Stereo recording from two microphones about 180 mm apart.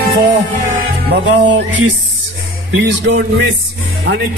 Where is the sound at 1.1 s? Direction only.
75° right (ahead or behind).